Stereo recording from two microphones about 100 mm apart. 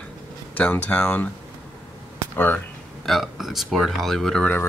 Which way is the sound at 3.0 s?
Centre (ahead or behind).